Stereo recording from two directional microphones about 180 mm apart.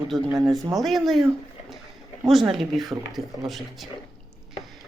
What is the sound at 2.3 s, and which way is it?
Speech, centre (ahead or behind).